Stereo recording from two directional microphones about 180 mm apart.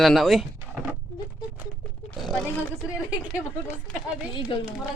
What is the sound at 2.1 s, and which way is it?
Speech, centre (ahead or behind).